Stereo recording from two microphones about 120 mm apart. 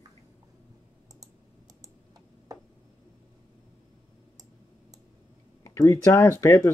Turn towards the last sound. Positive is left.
turn(degrees=25)  # may be behind; listen again after turning